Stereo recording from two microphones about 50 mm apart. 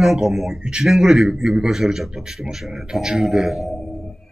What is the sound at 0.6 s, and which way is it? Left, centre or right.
A man's voice, centre.